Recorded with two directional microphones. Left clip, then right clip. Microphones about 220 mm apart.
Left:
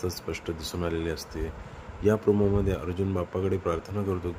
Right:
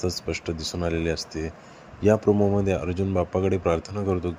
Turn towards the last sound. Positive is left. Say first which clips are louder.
# right 4 dB
turn(degrees=-20)  # may be behind; listen again after turning